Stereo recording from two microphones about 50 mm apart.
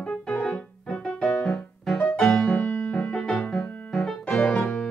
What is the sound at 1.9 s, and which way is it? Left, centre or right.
Music, left.